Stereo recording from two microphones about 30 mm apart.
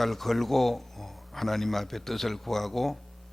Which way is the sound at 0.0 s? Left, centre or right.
Centre.